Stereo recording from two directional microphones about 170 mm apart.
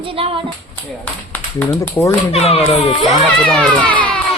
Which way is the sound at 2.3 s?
35° left (ahead or behind).